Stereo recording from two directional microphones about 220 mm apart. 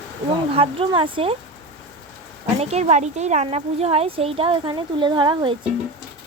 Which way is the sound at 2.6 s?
30° right (ahead or behind).